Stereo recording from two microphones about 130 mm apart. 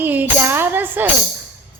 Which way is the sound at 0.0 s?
15° right (ahead or behind).